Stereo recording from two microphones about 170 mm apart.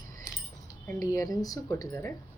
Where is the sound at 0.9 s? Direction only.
20° left (ahead or behind).